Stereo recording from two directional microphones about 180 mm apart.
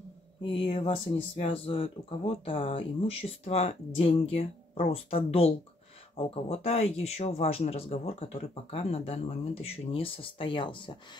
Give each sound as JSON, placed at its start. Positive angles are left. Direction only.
{"t": 0.4, "sound": "speech", "side_deg": 30}